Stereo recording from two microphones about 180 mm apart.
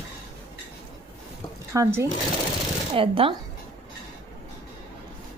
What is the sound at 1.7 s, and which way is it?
Speech, 15° right (ahead or behind).